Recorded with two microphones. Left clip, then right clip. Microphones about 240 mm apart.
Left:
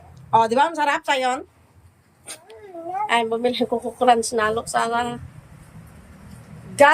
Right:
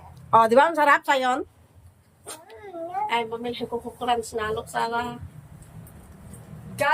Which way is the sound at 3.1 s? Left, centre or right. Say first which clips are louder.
Left 10 dB; centre.